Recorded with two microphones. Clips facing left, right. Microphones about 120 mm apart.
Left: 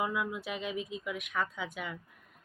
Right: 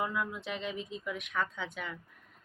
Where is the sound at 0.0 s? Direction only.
5° left (ahead or behind).